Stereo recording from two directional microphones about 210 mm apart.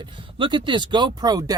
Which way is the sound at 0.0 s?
25° right (ahead or behind).